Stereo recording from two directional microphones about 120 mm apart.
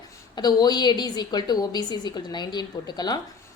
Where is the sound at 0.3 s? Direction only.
35° left (ahead or behind).